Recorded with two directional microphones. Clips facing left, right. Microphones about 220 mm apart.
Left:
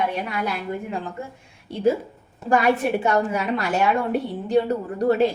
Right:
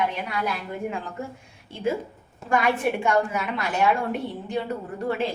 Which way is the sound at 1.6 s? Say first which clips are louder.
Left 6 dB; 40° left (ahead or behind).